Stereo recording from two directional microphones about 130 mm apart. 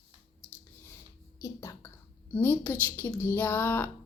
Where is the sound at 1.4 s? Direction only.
20° left (ahead or behind).